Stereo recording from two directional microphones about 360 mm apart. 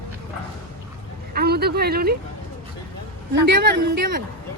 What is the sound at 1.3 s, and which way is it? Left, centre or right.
Speech, right.